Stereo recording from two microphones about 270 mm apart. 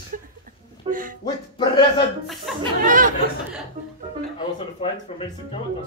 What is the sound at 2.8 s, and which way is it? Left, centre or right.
Chatter, right.